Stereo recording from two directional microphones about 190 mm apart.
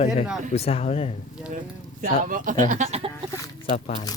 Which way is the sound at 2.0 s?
45° right (ahead or behind).